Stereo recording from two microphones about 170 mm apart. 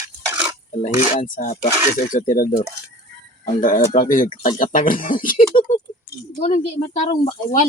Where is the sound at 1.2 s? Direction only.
50° left (ahead or behind).